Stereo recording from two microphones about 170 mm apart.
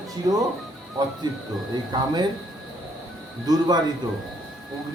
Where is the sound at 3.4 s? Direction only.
25° right (ahead or behind).